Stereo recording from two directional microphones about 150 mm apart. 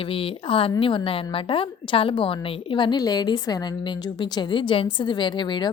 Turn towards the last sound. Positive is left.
turn(degrees=30)  # may be behind; listen again after turning